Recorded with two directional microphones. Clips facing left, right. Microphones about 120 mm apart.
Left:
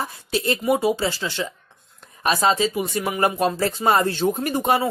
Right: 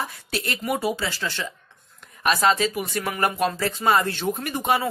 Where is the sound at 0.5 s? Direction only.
25° left (ahead or behind).